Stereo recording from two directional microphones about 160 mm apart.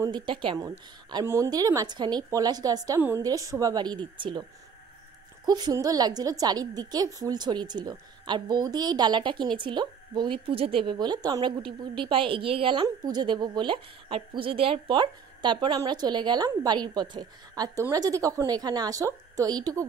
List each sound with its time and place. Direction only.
0.0 s a woman's voice: 30° right (ahead or behind)
0.7 s a woman's voice: 15° right (ahead or behind)